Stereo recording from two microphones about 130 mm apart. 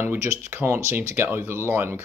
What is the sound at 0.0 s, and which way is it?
Speech, 15° right (ahead or behind).